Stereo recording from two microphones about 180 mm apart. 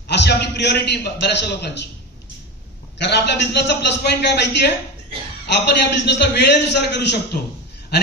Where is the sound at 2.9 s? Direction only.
70° left (ahead or behind).